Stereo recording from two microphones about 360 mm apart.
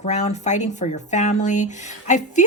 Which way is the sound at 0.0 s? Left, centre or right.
Centre.